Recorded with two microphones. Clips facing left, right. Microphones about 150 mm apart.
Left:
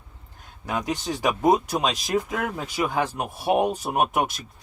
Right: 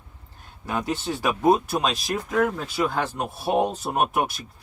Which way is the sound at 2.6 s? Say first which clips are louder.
Even; 15° left (ahead or behind).